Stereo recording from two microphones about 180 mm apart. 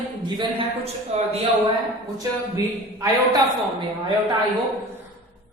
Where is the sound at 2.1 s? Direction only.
20° right (ahead or behind).